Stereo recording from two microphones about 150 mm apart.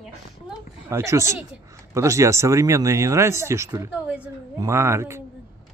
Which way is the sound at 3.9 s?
10° right (ahead or behind).